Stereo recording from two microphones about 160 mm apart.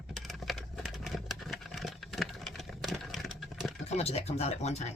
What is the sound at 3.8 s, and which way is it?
Speech, 40° left (ahead or behind).